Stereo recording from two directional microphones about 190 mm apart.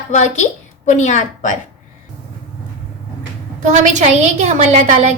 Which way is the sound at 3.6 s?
40° right (ahead or behind).